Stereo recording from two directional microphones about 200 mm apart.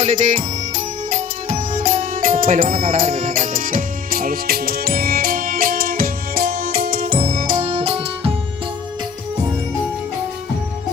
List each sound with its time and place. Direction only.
0.0 s music: 35° right (ahead or behind)